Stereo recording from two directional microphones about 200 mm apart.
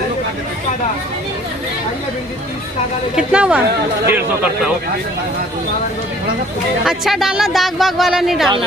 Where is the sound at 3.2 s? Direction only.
5° right (ahead or behind).